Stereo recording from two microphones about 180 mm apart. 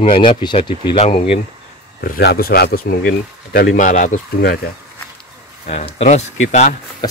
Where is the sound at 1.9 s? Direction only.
60° left (ahead or behind).